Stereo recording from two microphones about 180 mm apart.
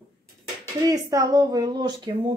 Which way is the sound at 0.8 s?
20° right (ahead or behind).